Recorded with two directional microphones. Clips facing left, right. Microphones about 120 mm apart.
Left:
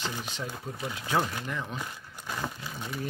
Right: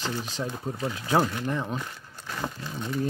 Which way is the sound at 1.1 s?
35° right (ahead or behind).